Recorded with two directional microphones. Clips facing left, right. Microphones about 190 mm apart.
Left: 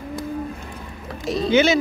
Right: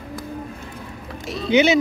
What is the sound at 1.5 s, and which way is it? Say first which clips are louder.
Speech: right 1 dB; 15° right (ahead or behind).